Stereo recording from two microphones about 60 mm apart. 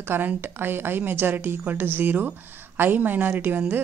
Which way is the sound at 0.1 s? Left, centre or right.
Right.